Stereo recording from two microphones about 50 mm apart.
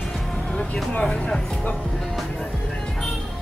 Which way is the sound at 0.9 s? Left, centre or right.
Centre.